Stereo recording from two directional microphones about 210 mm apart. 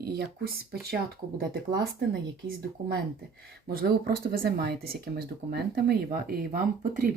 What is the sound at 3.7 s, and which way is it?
Speech, 45° right (ahead or behind).